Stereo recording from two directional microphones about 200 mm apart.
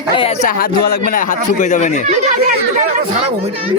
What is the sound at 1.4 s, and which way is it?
Speech, 35° left (ahead or behind).